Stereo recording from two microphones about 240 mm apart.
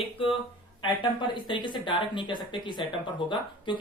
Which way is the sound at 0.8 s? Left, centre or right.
Centre.